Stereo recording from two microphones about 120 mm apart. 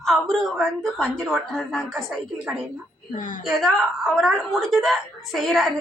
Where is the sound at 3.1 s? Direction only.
90° left.